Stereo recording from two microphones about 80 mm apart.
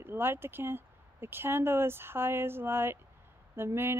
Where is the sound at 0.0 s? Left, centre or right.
Right.